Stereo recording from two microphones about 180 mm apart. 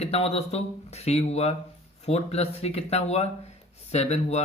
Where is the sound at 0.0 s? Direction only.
35° left (ahead or behind).